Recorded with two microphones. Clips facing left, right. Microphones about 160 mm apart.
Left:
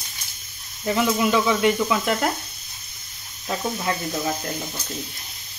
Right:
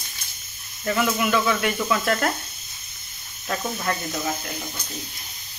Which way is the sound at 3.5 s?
15° left (ahead or behind).